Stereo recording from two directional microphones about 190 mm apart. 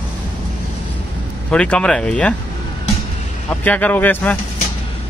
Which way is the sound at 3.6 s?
10° left (ahead or behind).